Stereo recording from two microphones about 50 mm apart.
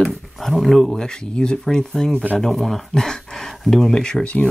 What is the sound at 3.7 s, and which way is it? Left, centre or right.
Speech, centre.